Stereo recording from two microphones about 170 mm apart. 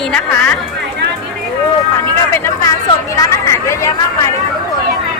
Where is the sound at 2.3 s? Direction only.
15° left (ahead or behind).